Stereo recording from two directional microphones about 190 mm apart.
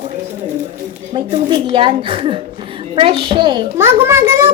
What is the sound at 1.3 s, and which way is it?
A woman's voice, 25° right (ahead or behind).